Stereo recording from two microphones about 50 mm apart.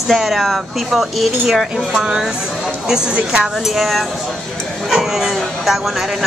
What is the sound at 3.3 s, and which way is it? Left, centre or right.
Speech, centre.